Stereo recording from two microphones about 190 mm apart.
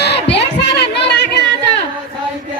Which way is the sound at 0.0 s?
65° left (ahead or behind).